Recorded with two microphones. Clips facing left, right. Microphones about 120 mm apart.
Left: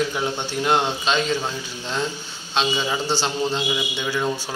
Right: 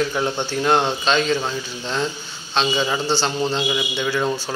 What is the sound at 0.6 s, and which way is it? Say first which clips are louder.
Speech: right 2 dB; 35° right (ahead or behind).